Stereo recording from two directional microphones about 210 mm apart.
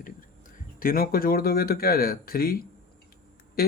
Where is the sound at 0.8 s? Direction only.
45° left (ahead or behind).